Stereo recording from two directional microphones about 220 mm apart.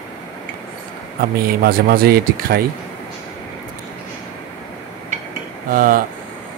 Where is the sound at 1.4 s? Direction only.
40° right (ahead or behind).